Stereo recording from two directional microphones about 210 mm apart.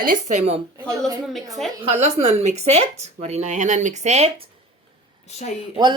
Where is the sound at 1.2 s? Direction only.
Centre (ahead or behind).